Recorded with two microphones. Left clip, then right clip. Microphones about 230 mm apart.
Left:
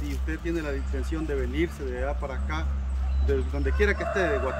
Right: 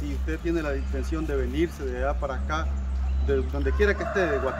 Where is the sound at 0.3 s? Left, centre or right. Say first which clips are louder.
Right 3 dB; centre.